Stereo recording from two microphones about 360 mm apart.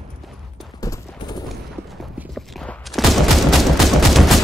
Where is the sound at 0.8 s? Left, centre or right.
Centre.